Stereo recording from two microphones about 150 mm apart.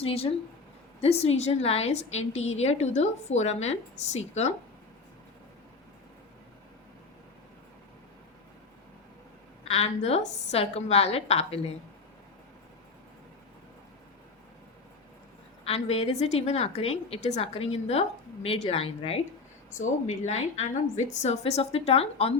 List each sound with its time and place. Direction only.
0.0 s a woman's voice: 40° left (ahead or behind)
9.6 s a woman's voice: 45° left (ahead or behind)
15.6 s a woman's voice: 45° left (ahead or behind)
19.7 s a woman's voice: 55° left (ahead or behind)